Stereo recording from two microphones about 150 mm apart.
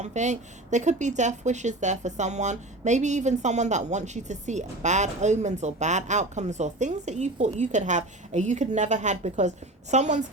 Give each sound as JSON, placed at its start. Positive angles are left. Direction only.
{"t": 0.0, "sound": "speech", "side_deg": -50}